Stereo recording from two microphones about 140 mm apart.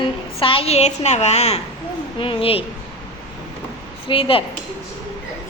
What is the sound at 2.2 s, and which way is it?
Speech, 40° left (ahead or behind).